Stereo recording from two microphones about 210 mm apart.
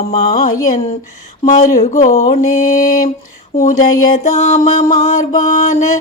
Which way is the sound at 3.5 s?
40° left (ahead or behind).